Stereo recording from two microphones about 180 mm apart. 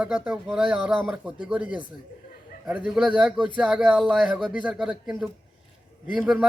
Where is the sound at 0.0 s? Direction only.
5° right (ahead or behind).